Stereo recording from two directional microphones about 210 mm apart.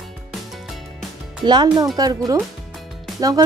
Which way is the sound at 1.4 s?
20° right (ahead or behind).